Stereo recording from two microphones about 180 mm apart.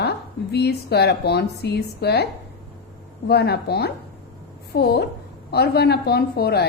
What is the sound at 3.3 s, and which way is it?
A woman's voice, 65° left (ahead or behind).